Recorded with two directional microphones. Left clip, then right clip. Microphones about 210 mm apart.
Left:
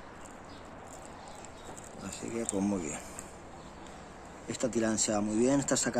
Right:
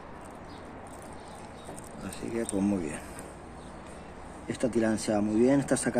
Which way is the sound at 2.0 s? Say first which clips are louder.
Right 3 dB; 10° left (ahead or behind).